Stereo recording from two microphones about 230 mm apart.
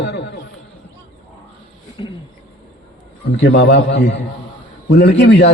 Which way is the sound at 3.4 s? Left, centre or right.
Left.